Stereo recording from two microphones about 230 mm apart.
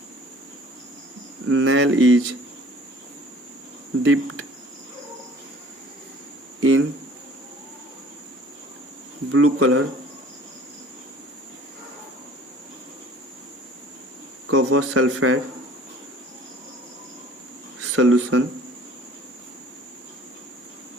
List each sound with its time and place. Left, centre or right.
1.5 s speech: right
4.0 s speech: right
6.6 s speech: right
9.3 s speech: right
14.4 s speech: right
17.9 s speech: right